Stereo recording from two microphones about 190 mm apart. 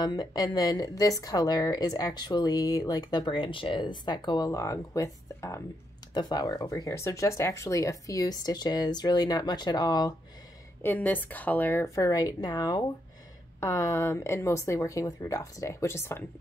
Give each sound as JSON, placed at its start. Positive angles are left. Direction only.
{"t": 0.0, "sound": "a woman's voice", "side_deg": 20}
{"t": 10.8, "sound": "speech", "side_deg": 10}